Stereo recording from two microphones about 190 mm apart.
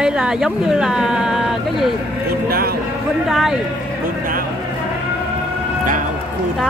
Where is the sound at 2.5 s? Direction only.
55° right (ahead or behind).